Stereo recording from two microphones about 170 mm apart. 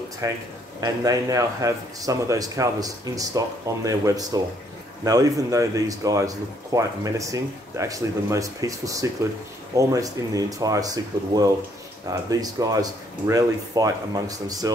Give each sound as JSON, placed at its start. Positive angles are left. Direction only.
{"t": 0.2, "sound": "speech", "side_deg": -20}